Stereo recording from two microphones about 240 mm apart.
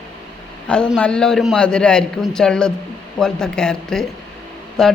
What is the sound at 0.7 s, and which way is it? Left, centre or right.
Speech, centre.